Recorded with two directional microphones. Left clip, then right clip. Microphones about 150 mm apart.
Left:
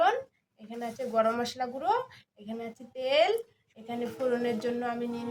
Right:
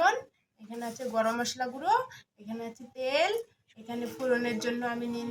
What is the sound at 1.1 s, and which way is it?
A woman's voice, 30° left (ahead or behind).